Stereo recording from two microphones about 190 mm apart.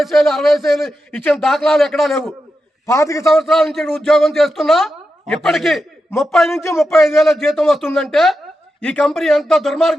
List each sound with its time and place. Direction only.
0.0 s a man's voice: centre (ahead or behind)
2.8 s a man's voice: 15° left (ahead or behind)
3.2 s a man's voice: centre (ahead or behind)